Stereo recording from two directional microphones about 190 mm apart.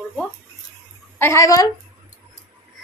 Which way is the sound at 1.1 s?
15° left (ahead or behind).